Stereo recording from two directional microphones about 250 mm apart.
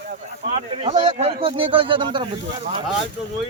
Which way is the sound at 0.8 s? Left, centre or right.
Right.